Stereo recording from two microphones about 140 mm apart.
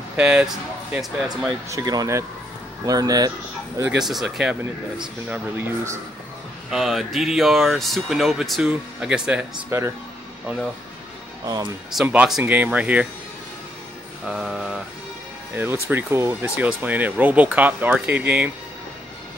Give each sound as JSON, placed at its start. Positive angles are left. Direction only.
{"t": 0.1, "sound": "speech", "side_deg": -10}
{"t": 1.7, "sound": "speech", "side_deg": -25}
{"t": 4.0, "sound": "speech", "side_deg": 0}
{"t": 5.3, "sound": "speech", "side_deg": -15}
{"t": 6.7, "sound": "speech", "side_deg": 0}
{"t": 9.7, "sound": "speech", "side_deg": -20}
{"t": 11.4, "sound": "speech", "side_deg": -30}
{"t": 12.0, "sound": "speech", "side_deg": -5}
{"t": 14.2, "sound": "mantra", "side_deg": 0}
{"t": 15.5, "sound": "speech", "side_deg": -15}